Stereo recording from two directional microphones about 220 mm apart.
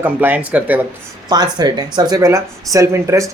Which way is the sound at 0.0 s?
10° right (ahead or behind).